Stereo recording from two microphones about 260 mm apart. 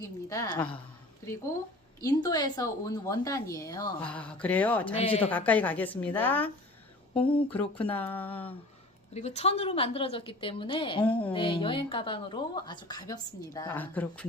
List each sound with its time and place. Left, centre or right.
0.0 s a woman's voice: centre
2.0 s a woman's voice: centre
4.9 s a woman's voice: left
5.3 s a woman's voice: centre
7.3 s a woman's voice: centre
7.8 s a woman's voice: centre
9.1 s a woman's voice: left; by 14.3 s centre